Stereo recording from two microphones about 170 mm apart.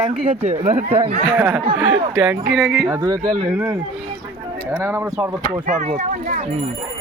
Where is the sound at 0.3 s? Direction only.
35° right (ahead or behind).